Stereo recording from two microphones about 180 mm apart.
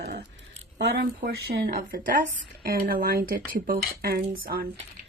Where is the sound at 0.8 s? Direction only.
65° right (ahead or behind).